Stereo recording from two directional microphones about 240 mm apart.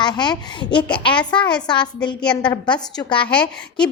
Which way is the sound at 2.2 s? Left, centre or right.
Centre.